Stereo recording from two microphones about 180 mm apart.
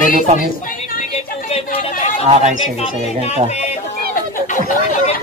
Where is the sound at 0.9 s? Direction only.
35° left (ahead or behind).